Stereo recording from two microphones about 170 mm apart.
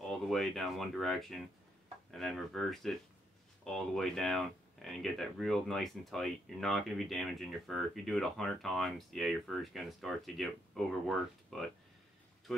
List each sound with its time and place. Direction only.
0.0 s speech: centre (ahead or behind)